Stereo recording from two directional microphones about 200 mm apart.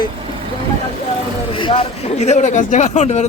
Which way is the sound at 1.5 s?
25° left (ahead or behind).